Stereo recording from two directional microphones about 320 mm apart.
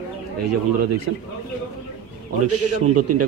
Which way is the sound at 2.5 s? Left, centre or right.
Right.